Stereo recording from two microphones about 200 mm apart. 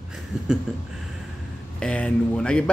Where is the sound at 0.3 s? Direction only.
5° right (ahead or behind).